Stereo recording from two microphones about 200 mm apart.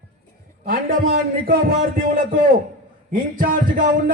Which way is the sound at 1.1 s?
50° right (ahead or behind).